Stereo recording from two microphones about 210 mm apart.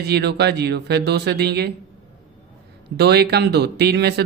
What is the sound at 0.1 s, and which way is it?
Speech, 50° right (ahead or behind).